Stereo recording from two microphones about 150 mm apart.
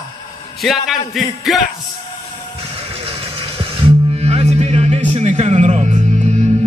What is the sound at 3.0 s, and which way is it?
Music, 35° right (ahead or behind).